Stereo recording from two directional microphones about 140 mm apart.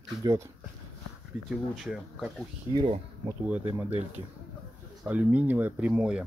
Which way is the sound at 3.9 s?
50° right (ahead or behind).